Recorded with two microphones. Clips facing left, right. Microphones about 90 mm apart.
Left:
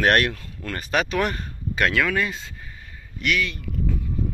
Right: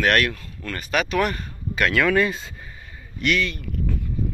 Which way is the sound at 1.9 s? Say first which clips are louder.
Right 4 dB; centre (ahead or behind).